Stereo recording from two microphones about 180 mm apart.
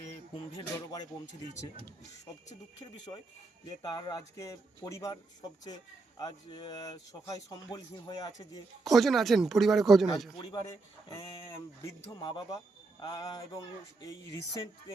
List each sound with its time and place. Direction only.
0.3 s a man's voice: 20° left (ahead or behind)
3.7 s a man's voice: 25° left (ahead or behind)
8.8 s speech: centre (ahead or behind)
10.3 s a man's voice: 25° left (ahead or behind)